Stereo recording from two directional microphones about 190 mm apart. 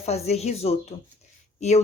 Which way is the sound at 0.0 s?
35° left (ahead or behind).